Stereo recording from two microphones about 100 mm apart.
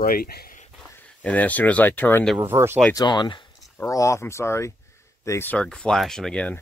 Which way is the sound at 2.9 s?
45° left (ahead or behind).